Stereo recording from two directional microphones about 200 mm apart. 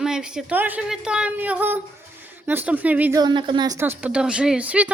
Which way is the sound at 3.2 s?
20° right (ahead or behind).